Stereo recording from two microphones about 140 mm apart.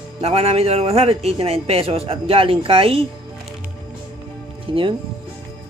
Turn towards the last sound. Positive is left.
turn(degrees=-35)  # may be behind; listen again after turning